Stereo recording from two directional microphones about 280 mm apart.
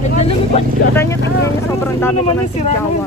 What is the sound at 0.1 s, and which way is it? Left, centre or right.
Vehicle, left.